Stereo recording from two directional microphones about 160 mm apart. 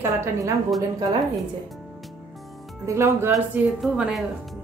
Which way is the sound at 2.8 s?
15° right (ahead or behind).